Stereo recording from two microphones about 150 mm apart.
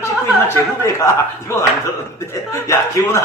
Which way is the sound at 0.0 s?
15° left (ahead or behind).